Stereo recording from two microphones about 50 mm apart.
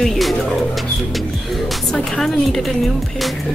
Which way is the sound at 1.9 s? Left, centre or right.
Centre.